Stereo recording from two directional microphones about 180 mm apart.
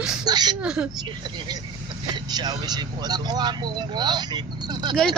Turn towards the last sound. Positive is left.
turn(degrees=-25)  # may be behind; listen again after turning